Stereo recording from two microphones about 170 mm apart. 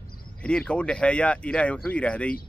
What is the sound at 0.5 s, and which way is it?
Speech, 5° left (ahead or behind).